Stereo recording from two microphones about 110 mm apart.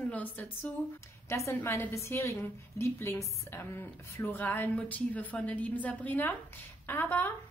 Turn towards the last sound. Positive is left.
turn(degrees=20)  # may be behind; listen again after turning